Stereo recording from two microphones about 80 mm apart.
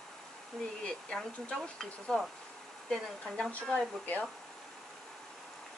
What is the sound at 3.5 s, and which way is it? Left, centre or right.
Speech, centre.